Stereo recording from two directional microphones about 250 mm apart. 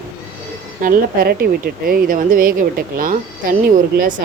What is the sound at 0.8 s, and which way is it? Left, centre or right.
A woman's voice, right.